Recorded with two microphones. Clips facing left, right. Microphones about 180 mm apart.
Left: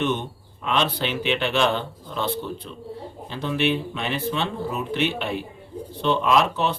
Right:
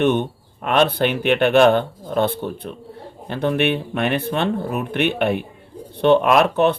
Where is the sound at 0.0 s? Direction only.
55° right (ahead or behind).